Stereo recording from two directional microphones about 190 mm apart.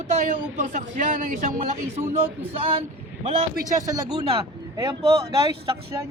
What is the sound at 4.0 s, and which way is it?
Speech, 20° right (ahead or behind).